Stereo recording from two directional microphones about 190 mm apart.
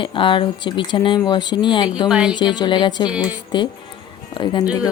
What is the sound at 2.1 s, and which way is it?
Speech, 5° right (ahead or behind).